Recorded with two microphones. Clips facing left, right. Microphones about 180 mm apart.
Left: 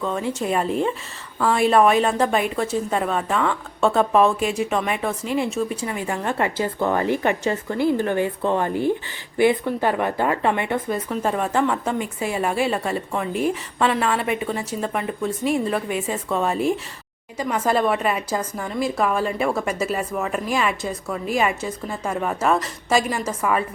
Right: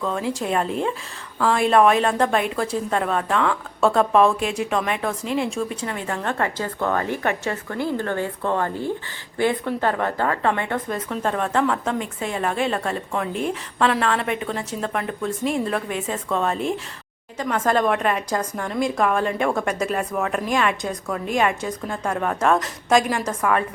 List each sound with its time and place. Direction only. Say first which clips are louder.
0.0 s a woman's voice: even; centre (ahead or behind)